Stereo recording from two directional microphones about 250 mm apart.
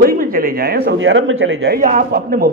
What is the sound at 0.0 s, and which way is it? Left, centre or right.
A man's voice, right.